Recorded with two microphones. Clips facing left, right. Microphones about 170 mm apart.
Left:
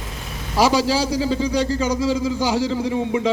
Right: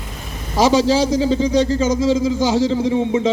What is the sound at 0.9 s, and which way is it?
A man's voice, 20° right (ahead or behind).